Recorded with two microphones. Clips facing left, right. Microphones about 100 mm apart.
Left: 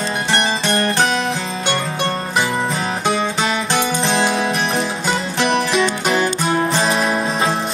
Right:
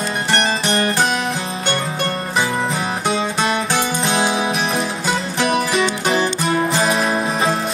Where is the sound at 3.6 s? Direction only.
10° right (ahead or behind).